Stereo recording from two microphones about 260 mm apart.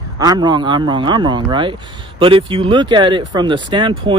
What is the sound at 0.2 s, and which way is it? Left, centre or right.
Speech, centre.